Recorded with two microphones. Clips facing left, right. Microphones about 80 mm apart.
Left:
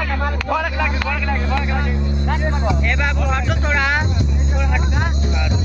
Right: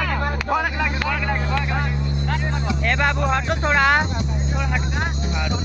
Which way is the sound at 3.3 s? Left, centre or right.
Right.